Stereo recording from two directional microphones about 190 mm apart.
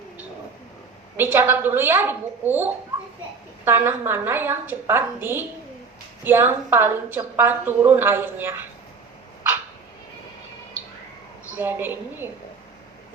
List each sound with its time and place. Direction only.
1.1 s a woman's voice: 10° right (ahead or behind)
11.5 s a woman's voice: 10° right (ahead or behind)